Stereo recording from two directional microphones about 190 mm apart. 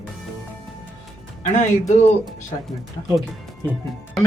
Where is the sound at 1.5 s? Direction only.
40° left (ahead or behind).